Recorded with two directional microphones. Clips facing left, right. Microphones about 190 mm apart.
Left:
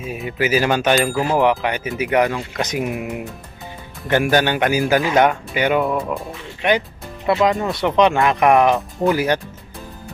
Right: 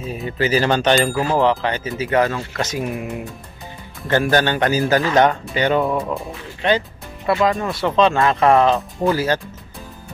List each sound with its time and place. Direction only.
0.0 s speech: 10° left (ahead or behind)
1.2 s speech: 15° left (ahead or behind)
6.6 s speech: 15° left (ahead or behind)